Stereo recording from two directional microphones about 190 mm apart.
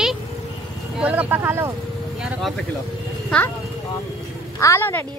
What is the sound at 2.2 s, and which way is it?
Speech, centre (ahead or behind).